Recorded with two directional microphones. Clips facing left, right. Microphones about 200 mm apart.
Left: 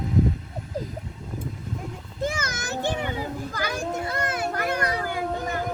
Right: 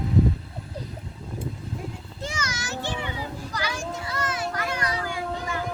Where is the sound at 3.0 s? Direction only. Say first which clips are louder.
Left 4 dB; 50° left (ahead or behind).